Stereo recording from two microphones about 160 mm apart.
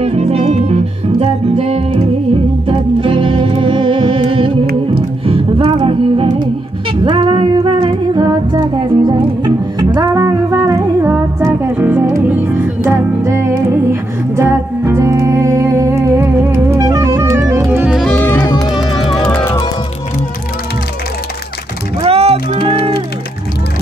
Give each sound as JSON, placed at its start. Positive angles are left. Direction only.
{"t": 0.0, "sound": "music", "side_deg": -40}
{"t": 9.9, "sound": "humming", "side_deg": -25}
{"t": 14.3, "sound": "music", "side_deg": -15}
{"t": 18.1, "sound": "music", "side_deg": 10}
{"t": 18.7, "sound": "music", "side_deg": 30}
{"t": 19.0, "sound": "music", "side_deg": 5}
{"t": 22.0, "sound": "music", "side_deg": -40}